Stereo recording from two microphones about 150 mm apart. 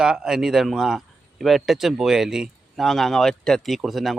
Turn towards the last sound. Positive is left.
turn(degrees=0)  # may be behind; listen again after turning